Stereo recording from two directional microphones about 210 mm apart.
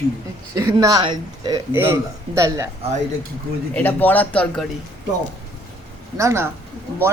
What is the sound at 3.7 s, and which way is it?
Speech, 10° left (ahead or behind).